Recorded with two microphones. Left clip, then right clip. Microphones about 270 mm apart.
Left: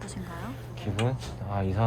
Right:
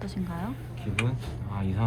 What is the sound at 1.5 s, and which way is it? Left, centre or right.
Speech, centre.